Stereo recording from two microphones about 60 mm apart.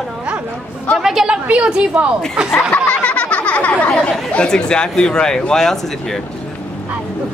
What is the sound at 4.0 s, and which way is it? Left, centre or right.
Speech, centre.